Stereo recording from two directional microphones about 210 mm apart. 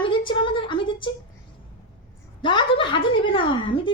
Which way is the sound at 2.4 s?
25° left (ahead or behind).